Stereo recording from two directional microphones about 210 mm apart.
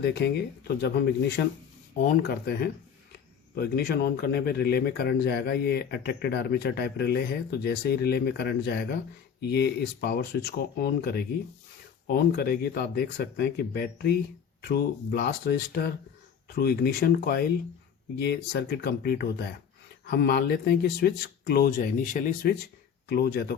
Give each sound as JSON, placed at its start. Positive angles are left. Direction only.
{"t": 0.0, "sound": "speech", "side_deg": 55}